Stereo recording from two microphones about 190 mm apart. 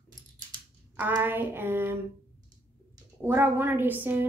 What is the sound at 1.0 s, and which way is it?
Speech, 10° right (ahead or behind).